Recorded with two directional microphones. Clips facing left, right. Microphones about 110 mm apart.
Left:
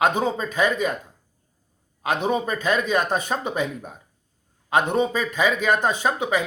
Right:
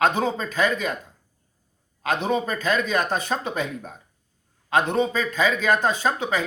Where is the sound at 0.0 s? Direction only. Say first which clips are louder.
Even; 15° left (ahead or behind).